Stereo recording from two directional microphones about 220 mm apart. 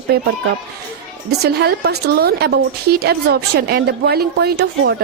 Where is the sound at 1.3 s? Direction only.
45° right (ahead or behind).